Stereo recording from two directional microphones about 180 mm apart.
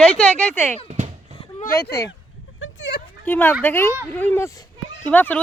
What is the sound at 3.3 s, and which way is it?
Speech, 10° left (ahead or behind).